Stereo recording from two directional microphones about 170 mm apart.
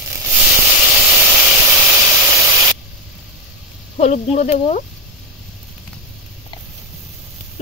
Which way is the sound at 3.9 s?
40° left (ahead or behind).